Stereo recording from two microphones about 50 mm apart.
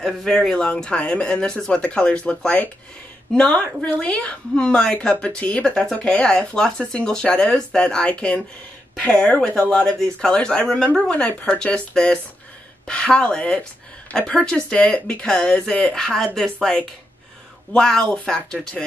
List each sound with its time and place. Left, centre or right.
0.0 s speech: centre; by 9.8 s left
9.8 s speech: centre
15.9 s speech: centre
17.7 s speech: centre